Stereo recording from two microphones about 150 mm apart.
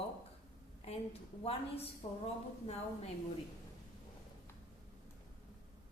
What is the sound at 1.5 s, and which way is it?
A woman's voice, 40° left (ahead or behind).